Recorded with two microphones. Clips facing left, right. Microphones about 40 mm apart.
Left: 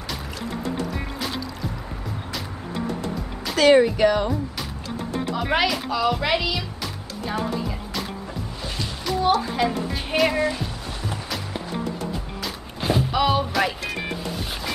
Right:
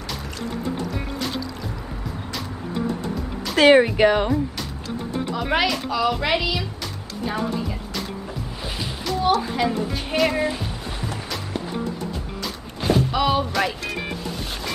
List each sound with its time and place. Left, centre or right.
3.5 s speech: right
5.3 s speech: centre
9.0 s speech: centre
12.8 s speech: centre